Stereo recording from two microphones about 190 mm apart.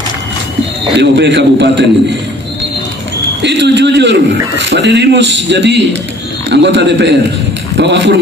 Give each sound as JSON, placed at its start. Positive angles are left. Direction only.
{"t": 0.9, "sound": "a man's voice", "side_deg": -65}
{"t": 3.4, "sound": "a man's voice", "side_deg": -65}